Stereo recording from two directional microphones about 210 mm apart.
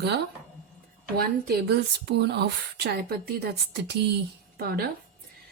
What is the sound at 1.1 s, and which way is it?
A woman's voice, 50° right (ahead or behind).